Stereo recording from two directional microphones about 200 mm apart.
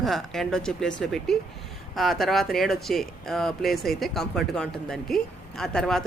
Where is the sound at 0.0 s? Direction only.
Centre (ahead or behind).